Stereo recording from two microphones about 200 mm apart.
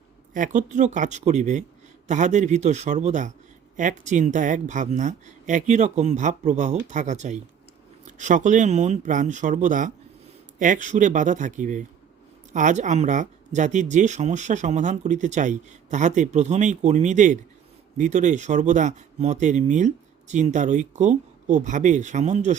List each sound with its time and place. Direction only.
0.3 s speech: 40° right (ahead or behind)